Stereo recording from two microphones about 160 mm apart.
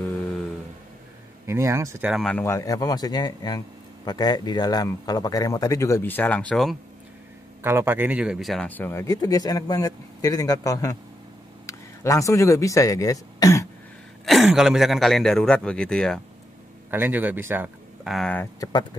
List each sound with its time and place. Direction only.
1.4 s speech: 15° right (ahead or behind)
2.0 s speech: 5° left (ahead or behind)
2.4 s a man's voice: 20° left (ahead or behind); by 6.8 s centre (ahead or behind)
7.6 s a man's voice: 15° right (ahead or behind); by 13.7 s 20° left (ahead or behind)
14.2 s speech: centre (ahead or behind)
16.9 s speech: 10° right (ahead or behind)
18.0 s speech: centre (ahead or behind)
18.3 s speech: 15° left (ahead or behind)